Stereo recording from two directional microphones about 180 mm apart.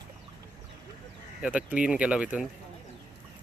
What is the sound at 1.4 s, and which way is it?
Speech, 5° right (ahead or behind).